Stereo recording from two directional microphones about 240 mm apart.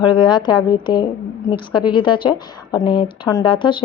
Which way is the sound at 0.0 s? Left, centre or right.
Centre.